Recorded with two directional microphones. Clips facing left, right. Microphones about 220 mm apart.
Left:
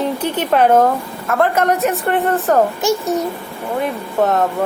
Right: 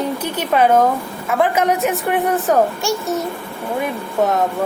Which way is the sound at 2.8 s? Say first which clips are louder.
Left 4 dB; 20° left (ahead or behind).